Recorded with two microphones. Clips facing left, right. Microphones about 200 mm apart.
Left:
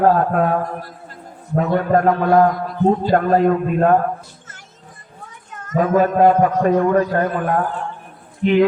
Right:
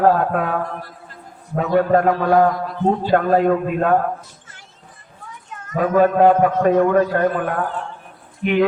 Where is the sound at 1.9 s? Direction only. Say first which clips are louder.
Left 3 dB; 45° left (ahead or behind).